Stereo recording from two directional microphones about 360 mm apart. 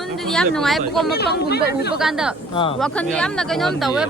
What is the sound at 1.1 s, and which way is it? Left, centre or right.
Speech, left.